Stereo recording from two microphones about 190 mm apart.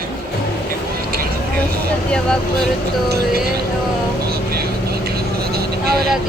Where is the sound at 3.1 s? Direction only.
55° right (ahead or behind).